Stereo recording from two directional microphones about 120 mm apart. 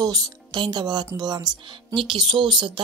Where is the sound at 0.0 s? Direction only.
35° right (ahead or behind).